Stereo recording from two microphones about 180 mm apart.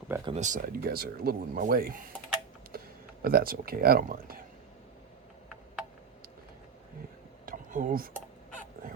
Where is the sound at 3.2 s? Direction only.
55° right (ahead or behind).